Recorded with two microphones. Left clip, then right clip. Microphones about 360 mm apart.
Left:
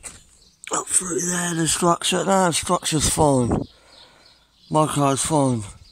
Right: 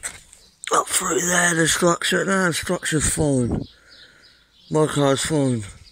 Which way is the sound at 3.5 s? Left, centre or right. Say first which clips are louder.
Left 3 dB; left.